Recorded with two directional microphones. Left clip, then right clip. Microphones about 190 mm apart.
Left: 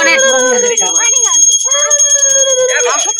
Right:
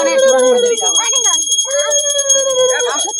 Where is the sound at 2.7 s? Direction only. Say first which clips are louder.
Left 3 dB; 35° right (ahead or behind).